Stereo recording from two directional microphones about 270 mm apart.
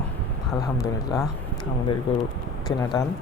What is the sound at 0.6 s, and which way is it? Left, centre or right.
Speech, centre.